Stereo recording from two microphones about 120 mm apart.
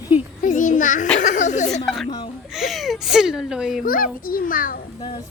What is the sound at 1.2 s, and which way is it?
Speech, 90° left.